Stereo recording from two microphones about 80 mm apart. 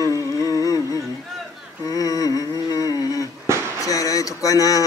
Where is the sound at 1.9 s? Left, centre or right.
Left.